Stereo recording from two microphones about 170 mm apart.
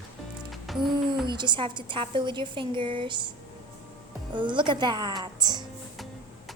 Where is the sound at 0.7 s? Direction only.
Centre (ahead or behind).